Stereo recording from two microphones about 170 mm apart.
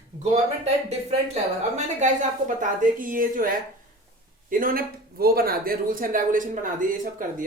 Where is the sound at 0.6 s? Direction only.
40° right (ahead or behind).